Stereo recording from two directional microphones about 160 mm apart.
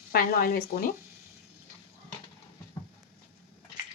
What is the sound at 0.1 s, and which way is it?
Speech, 65° left (ahead or behind).